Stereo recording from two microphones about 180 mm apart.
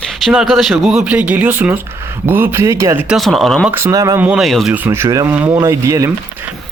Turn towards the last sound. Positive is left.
turn(degrees=-15)  # may be behind; listen again after turning